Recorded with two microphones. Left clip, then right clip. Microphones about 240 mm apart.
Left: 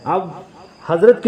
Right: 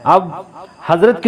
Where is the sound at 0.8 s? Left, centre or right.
Right.